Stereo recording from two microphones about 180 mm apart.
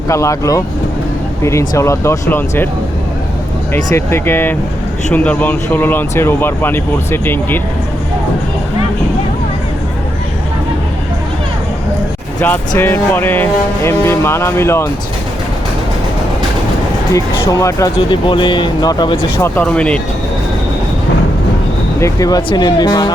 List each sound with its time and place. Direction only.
0.1 s speech: 15° left (ahead or behind)
3.9 s speech: 15° left (ahead or behind)
12.4 s speech: 10° left (ahead or behind)
17.1 s speech: 20° left (ahead or behind)
19.4 s speech: 5° left (ahead or behind)
22.0 s speech: 20° left (ahead or behind)